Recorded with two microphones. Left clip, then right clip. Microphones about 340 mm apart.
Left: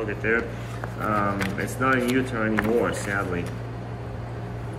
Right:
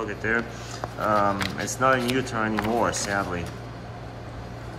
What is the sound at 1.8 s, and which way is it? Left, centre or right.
Speech, right.